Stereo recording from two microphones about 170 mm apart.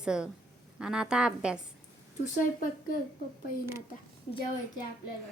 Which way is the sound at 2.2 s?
50° left (ahead or behind).